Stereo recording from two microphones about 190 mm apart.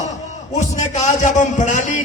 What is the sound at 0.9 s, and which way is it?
A man's voice, 40° left (ahead or behind).